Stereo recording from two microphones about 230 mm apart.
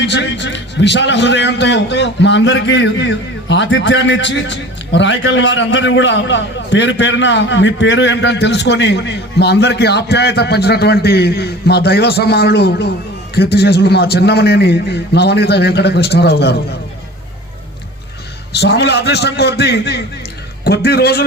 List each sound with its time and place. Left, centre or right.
0.0 s a man's voice: left
18.6 s a man's voice: left